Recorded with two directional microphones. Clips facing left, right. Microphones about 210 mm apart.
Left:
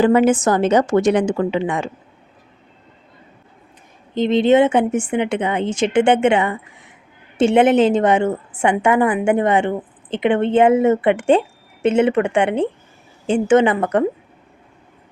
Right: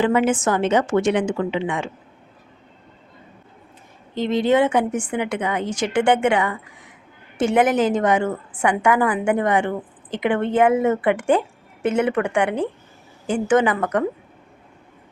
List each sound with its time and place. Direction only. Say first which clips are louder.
0.0 s a woman's voice: left 5 dB; 40° left (ahead or behind)
4.1 s a woman's voice: left 4 dB; 20° left (ahead or behind)